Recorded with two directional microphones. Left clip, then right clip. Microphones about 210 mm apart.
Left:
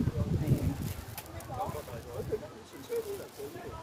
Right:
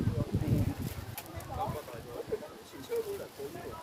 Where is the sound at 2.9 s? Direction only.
30° right (ahead or behind).